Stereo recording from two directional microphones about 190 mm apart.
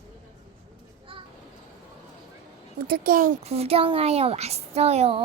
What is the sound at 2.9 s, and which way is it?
Speech, 45° right (ahead or behind).